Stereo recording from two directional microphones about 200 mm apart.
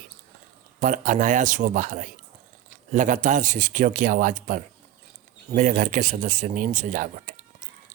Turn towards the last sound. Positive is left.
turn(degrees=-40)  # may be behind; listen again after turning